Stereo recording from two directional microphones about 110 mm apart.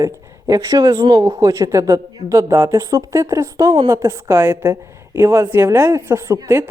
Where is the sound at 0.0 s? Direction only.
30° right (ahead or behind).